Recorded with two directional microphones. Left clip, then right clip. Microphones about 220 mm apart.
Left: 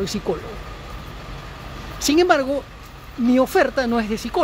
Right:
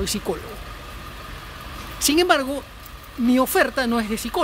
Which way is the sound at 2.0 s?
5° right (ahead or behind).